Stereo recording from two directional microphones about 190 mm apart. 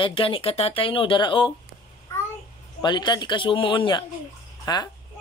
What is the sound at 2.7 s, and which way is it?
A child's voice, 25° left (ahead or behind).